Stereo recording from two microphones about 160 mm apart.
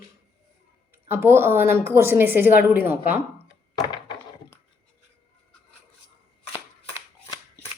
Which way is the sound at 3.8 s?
25° left (ahead or behind).